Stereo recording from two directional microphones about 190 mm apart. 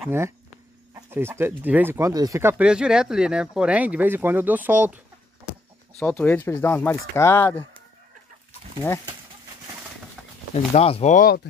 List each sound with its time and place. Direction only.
0.9 s speech: 15° right (ahead or behind)
5.9 s speech: 10° left (ahead or behind)
10.7 s speech: 35° left (ahead or behind)